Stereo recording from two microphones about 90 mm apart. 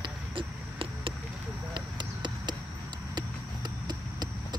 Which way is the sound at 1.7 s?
55° right (ahead or behind).